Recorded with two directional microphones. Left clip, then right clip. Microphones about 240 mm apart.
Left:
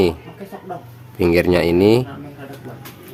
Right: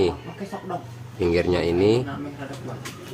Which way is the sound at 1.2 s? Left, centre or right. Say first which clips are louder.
Left 6 dB; left.